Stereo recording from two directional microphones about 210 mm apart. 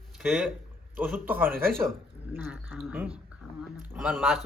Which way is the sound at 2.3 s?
10° right (ahead or behind).